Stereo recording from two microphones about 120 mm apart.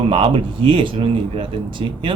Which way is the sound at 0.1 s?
50° right (ahead or behind).